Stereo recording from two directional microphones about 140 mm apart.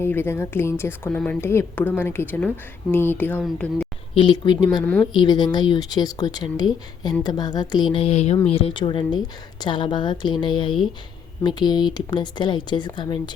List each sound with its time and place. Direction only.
0.0 s a woman's voice: 15° left (ahead or behind)
4.1 s a woman's voice: 35° left (ahead or behind)
4.8 s a woman's voice: 10° left (ahead or behind)
5.1 s speech: 30° left (ahead or behind)
7.9 s a woman's voice: 45° left (ahead or behind)